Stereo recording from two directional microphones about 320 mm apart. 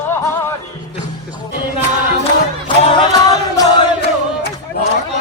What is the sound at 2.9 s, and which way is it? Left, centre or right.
Music, centre.